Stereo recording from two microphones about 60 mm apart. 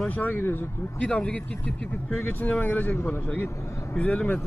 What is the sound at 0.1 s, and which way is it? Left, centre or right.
Speech, left.